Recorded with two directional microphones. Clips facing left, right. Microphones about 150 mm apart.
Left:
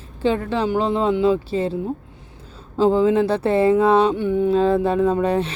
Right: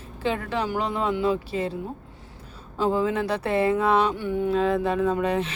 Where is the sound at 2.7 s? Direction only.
30° left (ahead or behind).